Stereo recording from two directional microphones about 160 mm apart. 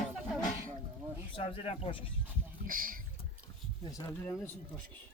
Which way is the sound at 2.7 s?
60° right (ahead or behind).